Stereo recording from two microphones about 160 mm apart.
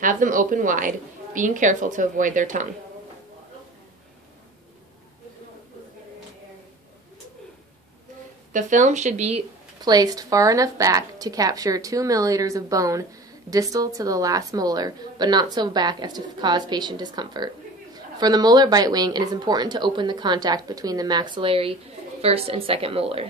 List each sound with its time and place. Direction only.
0.0 s a woman's voice: 55° right (ahead or behind)
8.5 s speech: 50° right (ahead or behind)
9.8 s a woman's voice: 25° right (ahead or behind)